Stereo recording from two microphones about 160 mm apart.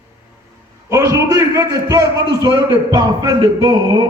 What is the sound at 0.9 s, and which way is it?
A man's voice, 20° right (ahead or behind).